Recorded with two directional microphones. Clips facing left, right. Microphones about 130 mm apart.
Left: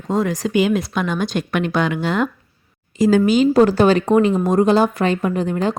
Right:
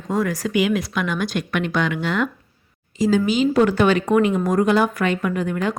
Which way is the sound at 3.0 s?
50° left (ahead or behind).